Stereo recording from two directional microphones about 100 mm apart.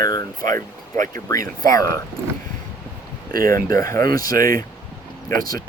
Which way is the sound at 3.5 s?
35° left (ahead or behind).